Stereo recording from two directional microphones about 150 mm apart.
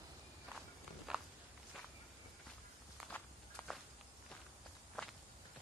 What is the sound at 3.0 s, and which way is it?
Walk, 10° left (ahead or behind).